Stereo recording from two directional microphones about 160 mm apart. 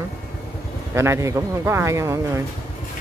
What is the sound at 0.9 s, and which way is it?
Speech, 15° right (ahead or behind).